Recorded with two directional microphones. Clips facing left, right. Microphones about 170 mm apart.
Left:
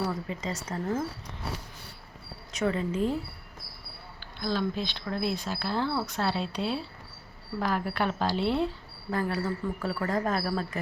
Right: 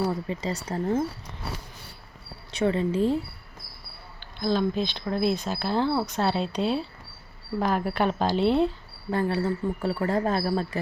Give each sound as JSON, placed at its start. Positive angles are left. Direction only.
{"t": 0.1, "sound": "speech", "side_deg": -35}
{"t": 2.5, "sound": "speech", "side_deg": -30}
{"t": 4.4, "sound": "speech", "side_deg": -20}